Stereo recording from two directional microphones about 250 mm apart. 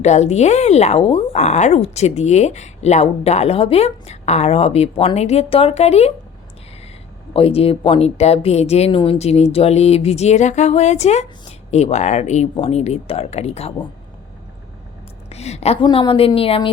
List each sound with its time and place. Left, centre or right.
0.0 s speech: left
7.3 s speech: left
15.3 s speech: left